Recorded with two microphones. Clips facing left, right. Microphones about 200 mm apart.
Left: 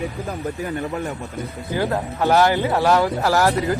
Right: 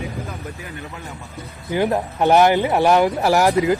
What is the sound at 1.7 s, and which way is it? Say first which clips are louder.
Speech: right 3 dB; 20° right (ahead or behind).